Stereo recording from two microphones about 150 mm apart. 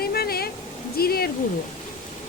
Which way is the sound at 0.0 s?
90° left.